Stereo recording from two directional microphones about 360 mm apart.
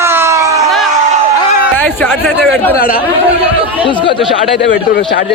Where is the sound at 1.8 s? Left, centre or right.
Centre.